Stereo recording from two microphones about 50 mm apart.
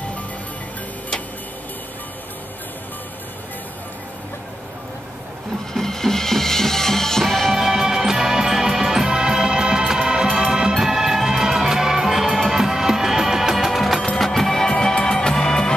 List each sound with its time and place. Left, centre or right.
5.7 s music: centre
7.6 s music: centre